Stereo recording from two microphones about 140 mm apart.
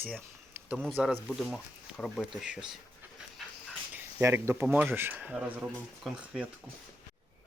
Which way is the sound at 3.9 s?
15° right (ahead or behind).